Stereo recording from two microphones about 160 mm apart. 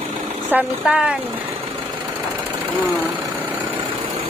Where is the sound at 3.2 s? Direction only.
30° right (ahead or behind).